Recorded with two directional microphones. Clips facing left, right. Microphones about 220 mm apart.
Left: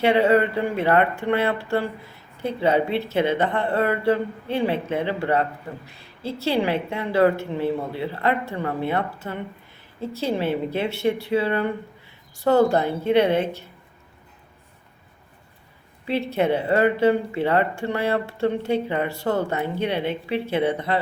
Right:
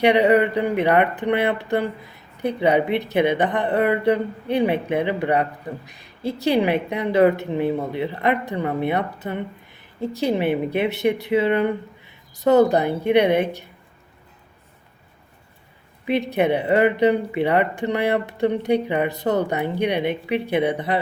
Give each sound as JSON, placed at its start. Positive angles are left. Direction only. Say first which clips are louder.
{"t": 0.0, "sound": "speech", "louder": "right 2 dB", "side_deg": -15}
{"t": 16.0, "sound": "speech", "louder": "right 2 dB", "side_deg": -15}